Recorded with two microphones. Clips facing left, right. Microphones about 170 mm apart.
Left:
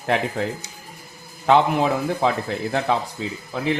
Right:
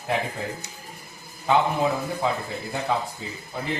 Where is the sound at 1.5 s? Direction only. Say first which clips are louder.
Left 4 dB; 90° left.